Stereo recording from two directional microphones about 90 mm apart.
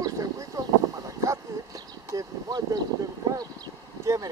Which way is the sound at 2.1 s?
40° right (ahead or behind).